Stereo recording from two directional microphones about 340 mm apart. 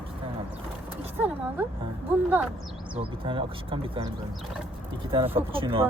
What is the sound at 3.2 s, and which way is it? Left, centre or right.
Speech, centre.